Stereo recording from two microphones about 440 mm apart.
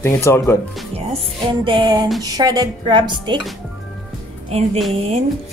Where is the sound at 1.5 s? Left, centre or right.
Centre.